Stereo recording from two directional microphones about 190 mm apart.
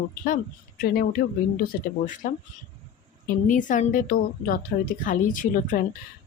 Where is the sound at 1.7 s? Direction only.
45° left (ahead or behind).